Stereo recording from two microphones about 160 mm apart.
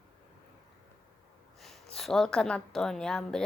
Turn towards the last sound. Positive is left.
turn(degrees=5)  # may be behind; listen again after turning